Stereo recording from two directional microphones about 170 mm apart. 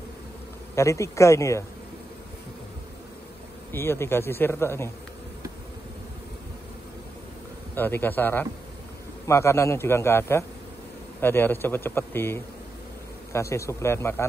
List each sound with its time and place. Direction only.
0.7 s a man's voice: 15° left (ahead or behind)
3.7 s a man's voice: 15° left (ahead or behind)
7.7 s a man's voice: 10° left (ahead or behind)